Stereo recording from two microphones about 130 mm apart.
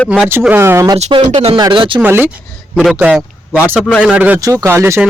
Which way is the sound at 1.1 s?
45° right (ahead or behind).